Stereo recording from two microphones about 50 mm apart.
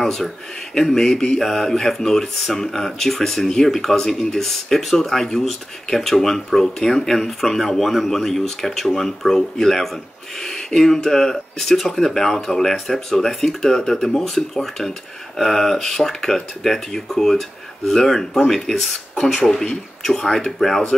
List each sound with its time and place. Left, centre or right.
0.0 s speech: centre